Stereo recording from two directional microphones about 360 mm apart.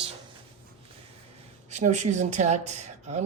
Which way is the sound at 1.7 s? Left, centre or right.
Centre.